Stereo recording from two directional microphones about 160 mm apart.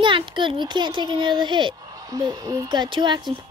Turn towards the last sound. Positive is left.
turn(degrees=-30)  # may be behind; listen again after turning